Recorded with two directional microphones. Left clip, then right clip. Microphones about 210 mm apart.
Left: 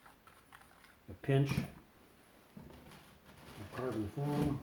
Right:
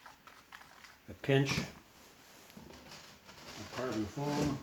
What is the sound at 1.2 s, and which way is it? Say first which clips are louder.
Speech: right 4 dB; 15° right (ahead or behind).